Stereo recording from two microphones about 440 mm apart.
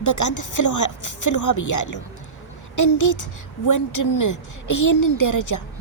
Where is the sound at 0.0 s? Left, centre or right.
Left.